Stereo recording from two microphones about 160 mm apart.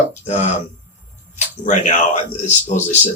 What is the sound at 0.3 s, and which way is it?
Speech, 45° left (ahead or behind).